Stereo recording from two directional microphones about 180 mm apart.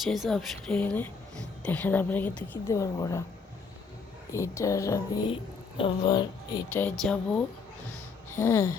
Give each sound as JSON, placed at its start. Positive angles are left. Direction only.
{"t": 0.0, "sound": "a woman's voice", "side_deg": 0}
{"t": 4.3, "sound": "speech", "side_deg": 15}
{"t": 6.8, "sound": "speech", "side_deg": 5}
{"t": 8.3, "sound": "a sound", "side_deg": 15}